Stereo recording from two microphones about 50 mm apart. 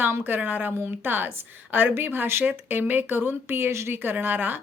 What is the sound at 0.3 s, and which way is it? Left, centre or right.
A woman's voice, right.